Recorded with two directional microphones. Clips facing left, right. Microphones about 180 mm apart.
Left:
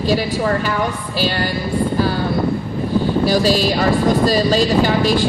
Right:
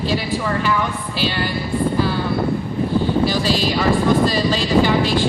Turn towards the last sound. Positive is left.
turn(degrees=40)  # may be behind; listen again after turning